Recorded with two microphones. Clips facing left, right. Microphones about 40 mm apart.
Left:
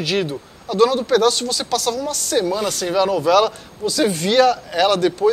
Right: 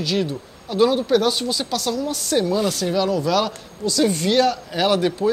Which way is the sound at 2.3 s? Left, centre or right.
Centre.